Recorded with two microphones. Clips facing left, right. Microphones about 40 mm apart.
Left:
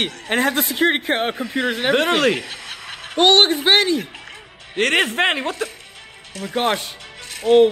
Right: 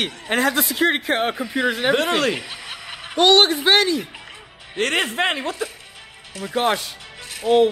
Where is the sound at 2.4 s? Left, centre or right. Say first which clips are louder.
Left 2 dB; centre.